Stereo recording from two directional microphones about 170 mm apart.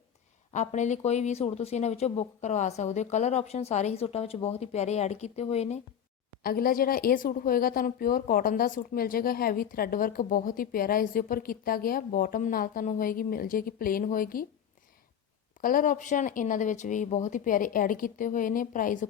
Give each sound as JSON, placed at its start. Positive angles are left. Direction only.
{"t": 0.5, "sound": "speech", "side_deg": 45}
{"t": 6.4, "sound": "speech", "side_deg": 60}
{"t": 15.6, "sound": "speech", "side_deg": 55}